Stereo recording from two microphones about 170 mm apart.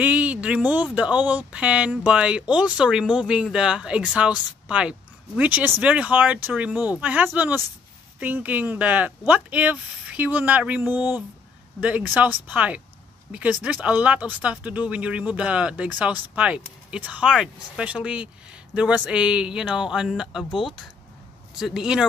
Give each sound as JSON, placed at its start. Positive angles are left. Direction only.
{"t": 0.0, "sound": "a sound", "side_deg": -10}
{"t": 0.9, "sound": "speech", "side_deg": -10}
{"t": 11.0, "sound": "speech", "side_deg": 25}
{"t": 11.8, "sound": "speech", "side_deg": -10}
{"t": 21.5, "sound": "speech", "side_deg": 0}